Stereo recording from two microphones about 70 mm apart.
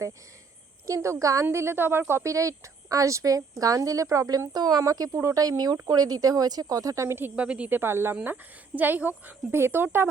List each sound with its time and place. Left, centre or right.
0.9 s speech: right
1.5 s speech: right
7.3 s speech: centre
7.7 s speech: right
8.1 s speech: right